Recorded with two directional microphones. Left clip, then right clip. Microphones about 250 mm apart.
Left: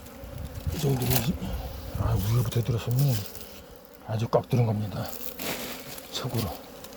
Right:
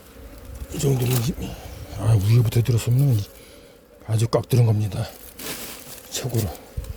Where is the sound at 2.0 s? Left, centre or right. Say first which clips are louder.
Right 6 dB; right.